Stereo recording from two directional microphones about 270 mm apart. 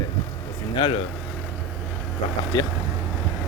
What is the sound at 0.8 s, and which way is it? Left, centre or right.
Speech, centre.